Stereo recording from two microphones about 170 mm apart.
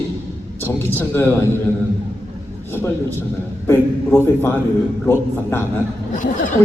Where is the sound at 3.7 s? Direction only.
15° left (ahead or behind).